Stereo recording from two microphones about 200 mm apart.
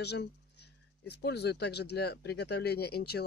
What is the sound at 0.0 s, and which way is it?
Speech, 55° left (ahead or behind).